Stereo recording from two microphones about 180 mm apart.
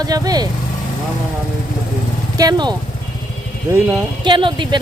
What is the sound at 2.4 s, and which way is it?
Speech, 25° right (ahead or behind).